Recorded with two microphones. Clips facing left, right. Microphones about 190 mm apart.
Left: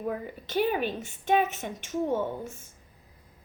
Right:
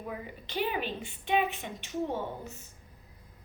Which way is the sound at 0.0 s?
45° left (ahead or behind).